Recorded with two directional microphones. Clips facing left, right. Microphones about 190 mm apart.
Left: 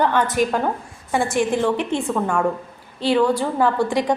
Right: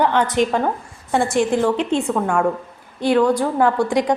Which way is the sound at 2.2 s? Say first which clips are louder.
Right 2 dB; 5° right (ahead or behind).